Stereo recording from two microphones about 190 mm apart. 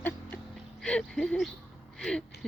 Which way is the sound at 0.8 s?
5° left (ahead or behind).